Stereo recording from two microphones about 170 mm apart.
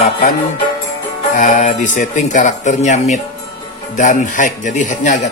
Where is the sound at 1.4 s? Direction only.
45° left (ahead or behind).